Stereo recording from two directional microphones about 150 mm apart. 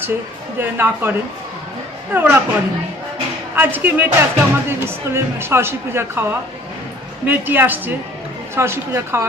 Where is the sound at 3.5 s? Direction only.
15° right (ahead or behind).